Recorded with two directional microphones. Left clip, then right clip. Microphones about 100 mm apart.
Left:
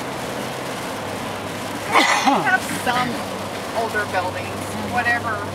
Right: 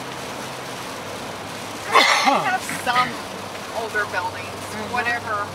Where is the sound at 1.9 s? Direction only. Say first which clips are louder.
Right 1 dB; 20° right (ahead or behind).